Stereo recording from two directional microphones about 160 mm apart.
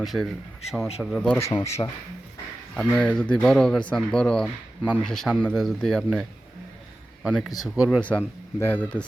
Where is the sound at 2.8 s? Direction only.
5° left (ahead or behind).